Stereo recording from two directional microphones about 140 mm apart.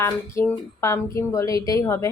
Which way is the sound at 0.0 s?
20° left (ahead or behind).